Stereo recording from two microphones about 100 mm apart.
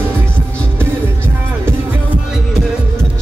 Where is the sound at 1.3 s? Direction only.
20° right (ahead or behind).